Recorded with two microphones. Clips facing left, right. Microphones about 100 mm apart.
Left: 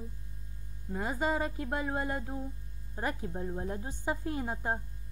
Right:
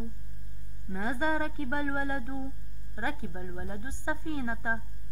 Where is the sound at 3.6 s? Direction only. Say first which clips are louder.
Left 2 dB; 15° right (ahead or behind).